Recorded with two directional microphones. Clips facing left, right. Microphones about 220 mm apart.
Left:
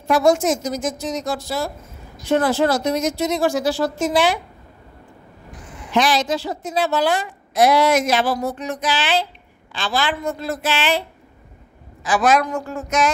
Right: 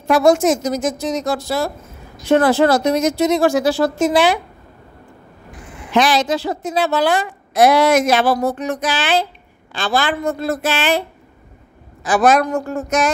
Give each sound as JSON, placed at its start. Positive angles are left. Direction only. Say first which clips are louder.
{"t": 0.1, "sound": "a woman's voice", "louder": "right 3 dB", "side_deg": -75}
{"t": 5.9, "sound": "a woman's voice", "louder": "right 3 dB", "side_deg": -80}
{"t": 12.5, "sound": "a sound", "louder": "right 5 dB", "side_deg": -40}